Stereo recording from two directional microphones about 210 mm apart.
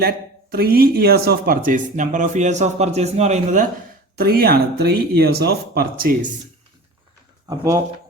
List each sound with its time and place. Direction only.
0.5 s speech: 45° right (ahead or behind)
4.2 s speech: 45° right (ahead or behind)
7.4 s speech: 15° right (ahead or behind)